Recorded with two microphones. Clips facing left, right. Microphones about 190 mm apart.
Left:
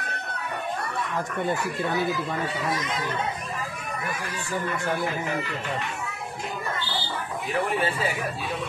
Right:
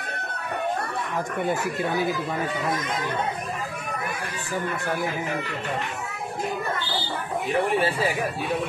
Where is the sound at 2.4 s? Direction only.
50° right (ahead or behind).